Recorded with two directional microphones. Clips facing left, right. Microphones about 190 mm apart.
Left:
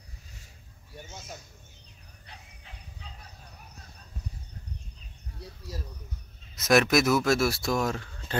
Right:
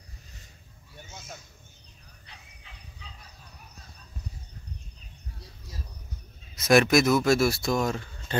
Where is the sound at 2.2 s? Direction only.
45° left (ahead or behind).